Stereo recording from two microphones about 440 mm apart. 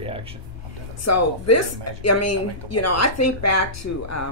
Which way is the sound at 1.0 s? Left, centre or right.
Left.